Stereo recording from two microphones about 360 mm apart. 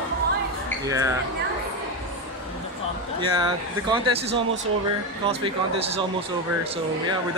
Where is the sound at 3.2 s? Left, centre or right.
Centre.